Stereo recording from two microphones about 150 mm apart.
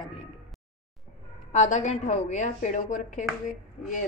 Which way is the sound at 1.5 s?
50° left (ahead or behind).